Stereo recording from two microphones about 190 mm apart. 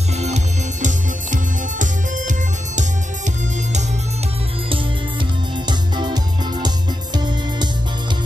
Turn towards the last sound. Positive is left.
turn(degrees=-25)  # may be behind; listen again after turning